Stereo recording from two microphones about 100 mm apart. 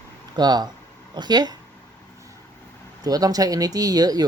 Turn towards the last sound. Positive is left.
turn(degrees=-40)  # may be behind; listen again after turning